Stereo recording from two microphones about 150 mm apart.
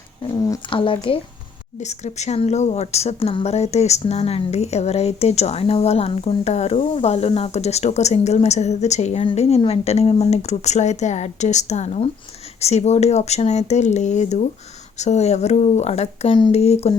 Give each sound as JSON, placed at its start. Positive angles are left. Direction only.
{"t": 0.7, "sound": "speech", "side_deg": 35}
{"t": 1.8, "sound": "a woman's voice", "side_deg": 50}